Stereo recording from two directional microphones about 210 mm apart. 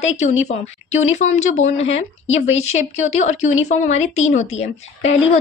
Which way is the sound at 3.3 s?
70° left (ahead or behind).